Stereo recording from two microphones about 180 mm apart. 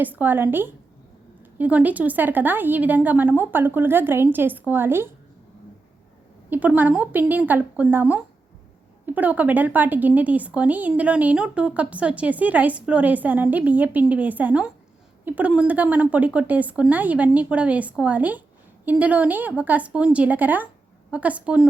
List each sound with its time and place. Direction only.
0.0 s speech: 10° right (ahead or behind)
6.5 s speech: 10° right (ahead or behind)